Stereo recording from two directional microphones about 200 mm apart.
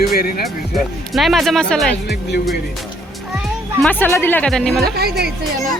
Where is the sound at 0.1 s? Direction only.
50° left (ahead or behind).